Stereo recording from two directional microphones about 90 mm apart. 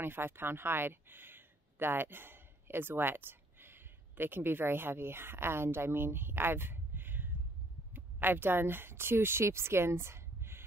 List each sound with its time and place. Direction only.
0.0 s speech: 25° right (ahead or behind)